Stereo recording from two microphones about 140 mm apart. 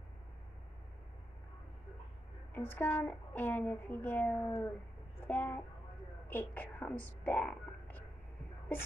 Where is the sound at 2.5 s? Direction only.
15° left (ahead or behind).